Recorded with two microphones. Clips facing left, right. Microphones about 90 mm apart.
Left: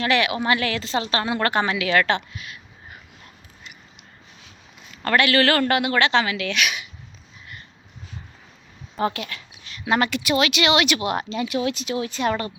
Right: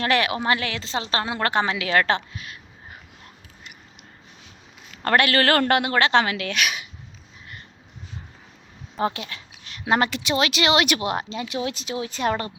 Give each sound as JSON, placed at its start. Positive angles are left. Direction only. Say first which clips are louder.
{"t": 0.0, "sound": "a woman's voice", "louder": "left 1 dB", "side_deg": -40}
{"t": 5.0, "sound": "a man's voice", "louder": "left 1 dB", "side_deg": -45}
{"t": 9.0, "sound": "a woman's voice", "louder": "left 1 dB", "side_deg": -25}
{"t": 11.0, "sound": "a woman's voice", "louder": "left 2 dB", "side_deg": -25}